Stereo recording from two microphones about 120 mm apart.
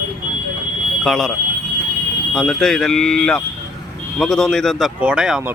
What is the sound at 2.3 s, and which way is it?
Speech, 5° left (ahead or behind).